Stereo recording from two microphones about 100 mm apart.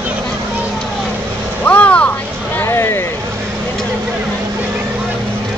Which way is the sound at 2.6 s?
25° left (ahead or behind).